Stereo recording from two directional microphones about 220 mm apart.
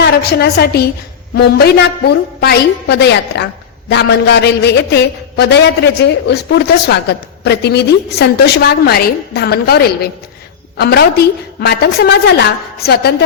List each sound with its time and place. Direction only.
0.0 s a woman's voice: 45° left (ahead or behind)